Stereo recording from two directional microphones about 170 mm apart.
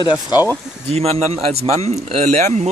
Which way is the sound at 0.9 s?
40° right (ahead or behind).